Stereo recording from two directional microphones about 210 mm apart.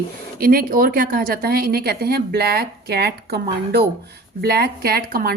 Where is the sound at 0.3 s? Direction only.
45° right (ahead or behind).